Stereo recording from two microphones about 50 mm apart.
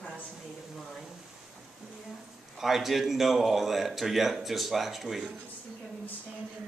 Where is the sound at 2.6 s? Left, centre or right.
Centre.